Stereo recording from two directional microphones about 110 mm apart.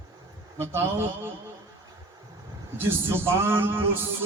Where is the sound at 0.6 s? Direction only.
20° right (ahead or behind).